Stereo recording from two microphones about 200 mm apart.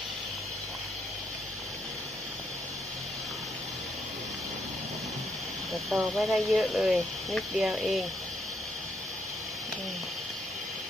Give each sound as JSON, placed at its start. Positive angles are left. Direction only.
{"t": 5.7, "sound": "speech", "side_deg": 0}